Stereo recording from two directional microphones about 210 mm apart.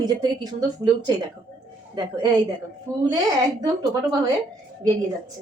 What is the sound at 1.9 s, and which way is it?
Speech, 20° right (ahead or behind).